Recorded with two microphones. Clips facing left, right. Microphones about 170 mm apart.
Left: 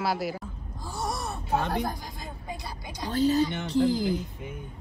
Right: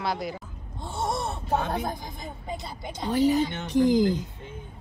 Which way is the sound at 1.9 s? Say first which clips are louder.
Right 1 dB; 20° right (ahead or behind).